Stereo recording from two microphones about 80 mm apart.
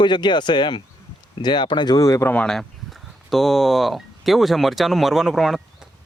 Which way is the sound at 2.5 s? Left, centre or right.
Centre.